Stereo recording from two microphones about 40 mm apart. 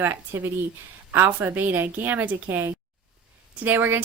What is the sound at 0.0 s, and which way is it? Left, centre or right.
Speech, right.